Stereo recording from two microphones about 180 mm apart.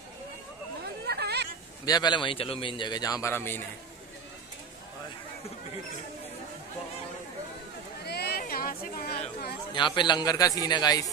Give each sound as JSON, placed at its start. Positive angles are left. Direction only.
{"t": 1.0, "sound": "hubbub", "side_deg": -65}
{"t": 1.9, "sound": "a man's voice", "side_deg": 25}
{"t": 8.0, "sound": "a sound", "side_deg": 65}
{"t": 9.8, "sound": "a man's voice", "side_deg": 25}